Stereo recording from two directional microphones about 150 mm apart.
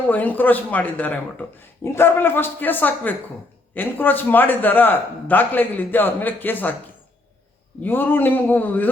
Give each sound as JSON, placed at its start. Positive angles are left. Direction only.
{"t": 0.1, "sound": "speech", "side_deg": 10}
{"t": 7.8, "sound": "speech", "side_deg": 15}